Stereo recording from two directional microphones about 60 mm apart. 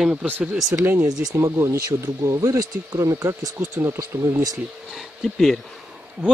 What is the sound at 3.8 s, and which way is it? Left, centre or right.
Speech, right.